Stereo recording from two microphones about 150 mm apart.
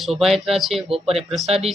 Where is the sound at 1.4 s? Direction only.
45° right (ahead or behind).